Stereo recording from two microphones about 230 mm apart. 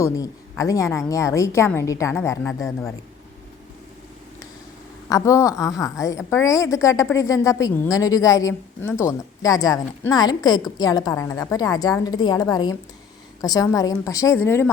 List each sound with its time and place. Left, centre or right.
0.0 s a woman's voice: centre
5.0 s a woman's voice: centre